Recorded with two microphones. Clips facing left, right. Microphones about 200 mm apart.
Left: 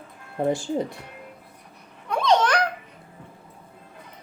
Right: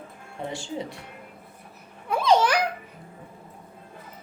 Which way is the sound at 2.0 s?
5° right (ahead or behind).